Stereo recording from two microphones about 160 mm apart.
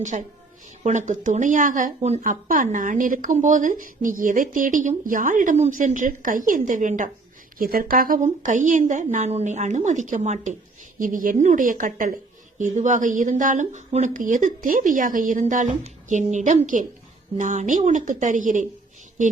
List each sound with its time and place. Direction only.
0.0 s a woman's voice: 50° right (ahead or behind)